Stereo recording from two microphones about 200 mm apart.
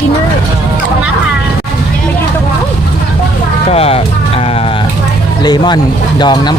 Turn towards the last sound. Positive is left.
turn(degrees=20)  # may be behind; listen again after turning